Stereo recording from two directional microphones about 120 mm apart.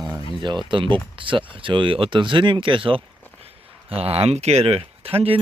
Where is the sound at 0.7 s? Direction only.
45° right (ahead or behind).